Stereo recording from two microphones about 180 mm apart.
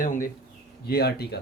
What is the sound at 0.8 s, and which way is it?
Speech, 60° left (ahead or behind).